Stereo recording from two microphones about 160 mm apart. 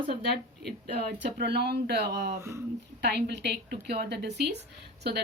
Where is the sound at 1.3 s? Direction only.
90° right.